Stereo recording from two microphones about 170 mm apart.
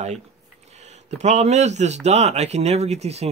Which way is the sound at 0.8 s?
40° right (ahead or behind).